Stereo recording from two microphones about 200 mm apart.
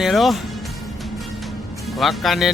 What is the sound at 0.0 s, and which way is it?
Speech, centre (ahead or behind).